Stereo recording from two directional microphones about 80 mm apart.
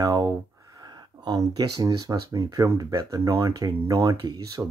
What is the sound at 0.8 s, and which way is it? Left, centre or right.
Speech, right.